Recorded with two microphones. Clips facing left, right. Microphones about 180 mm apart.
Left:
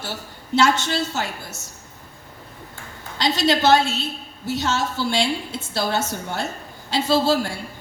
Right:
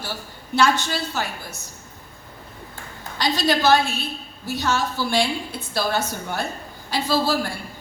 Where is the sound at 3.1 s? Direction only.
25° left (ahead or behind).